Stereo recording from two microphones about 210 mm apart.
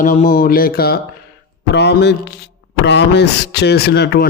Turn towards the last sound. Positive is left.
turn(degrees=50)  # may be behind; listen again after turning